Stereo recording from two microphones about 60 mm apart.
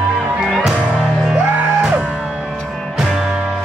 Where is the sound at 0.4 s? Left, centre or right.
Centre.